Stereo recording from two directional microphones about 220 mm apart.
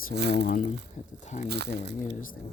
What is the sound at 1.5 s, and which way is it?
Speech, 50° right (ahead or behind).